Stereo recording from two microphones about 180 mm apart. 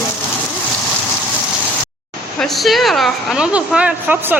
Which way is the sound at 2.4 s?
Centre (ahead or behind).